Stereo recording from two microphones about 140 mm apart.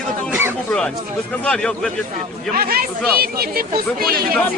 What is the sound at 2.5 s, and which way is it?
Speech, 90° right.